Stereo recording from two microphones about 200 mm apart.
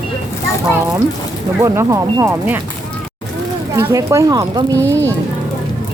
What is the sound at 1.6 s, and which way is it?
Speech, 15° right (ahead or behind).